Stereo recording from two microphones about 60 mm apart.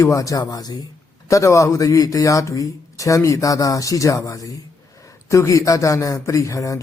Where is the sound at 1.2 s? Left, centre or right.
Left.